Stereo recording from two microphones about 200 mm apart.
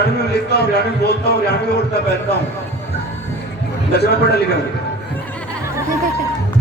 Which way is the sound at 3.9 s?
55° left (ahead or behind).